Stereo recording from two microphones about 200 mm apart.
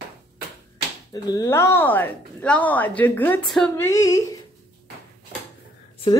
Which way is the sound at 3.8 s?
15° left (ahead or behind).